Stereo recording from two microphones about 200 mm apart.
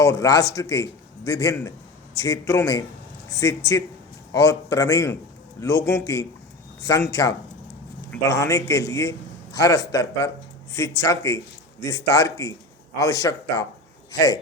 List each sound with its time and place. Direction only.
0.0 s a man's voice: 15° left (ahead or behind)